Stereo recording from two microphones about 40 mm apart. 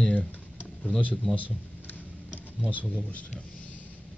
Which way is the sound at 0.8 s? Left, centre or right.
Left.